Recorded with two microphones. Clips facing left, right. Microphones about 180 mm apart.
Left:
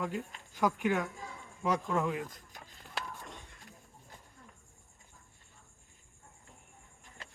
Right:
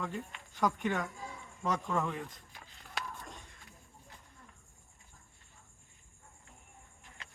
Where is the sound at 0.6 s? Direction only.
10° left (ahead or behind).